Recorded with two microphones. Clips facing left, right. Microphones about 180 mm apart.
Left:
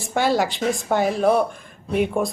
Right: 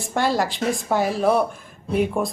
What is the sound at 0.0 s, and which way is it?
A woman's voice, centre (ahead or behind).